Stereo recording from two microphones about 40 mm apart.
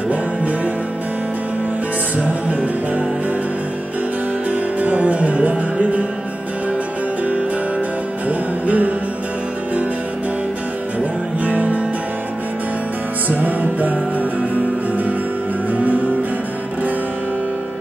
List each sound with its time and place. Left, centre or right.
2.2 s music: right
4.5 s music: right
8.3 s music: right
11.4 s music: right
13.3 s music: right
15.7 s music: right